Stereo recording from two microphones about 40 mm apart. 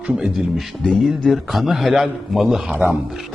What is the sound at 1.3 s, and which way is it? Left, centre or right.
Speech, centre.